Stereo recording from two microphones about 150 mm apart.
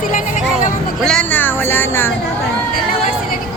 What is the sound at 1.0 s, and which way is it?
Speech, 10° left (ahead or behind).